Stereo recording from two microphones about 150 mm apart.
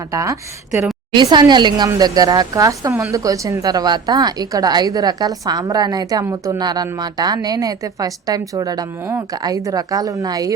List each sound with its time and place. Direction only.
0.1 s speech: 20° right (ahead or behind)